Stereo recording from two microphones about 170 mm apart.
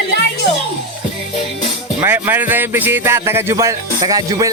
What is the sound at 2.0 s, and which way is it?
Speech, 10° right (ahead or behind).